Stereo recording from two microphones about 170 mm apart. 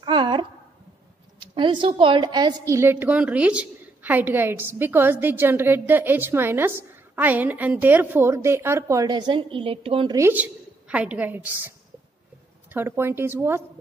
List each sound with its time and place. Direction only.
0.0 s a sound: 30° right (ahead or behind)
1.4 s a woman's voice: 30° right (ahead or behind)
10.1 s a woman's voice: 10° right (ahead or behind)
12.7 s a woman's voice: 15° right (ahead or behind)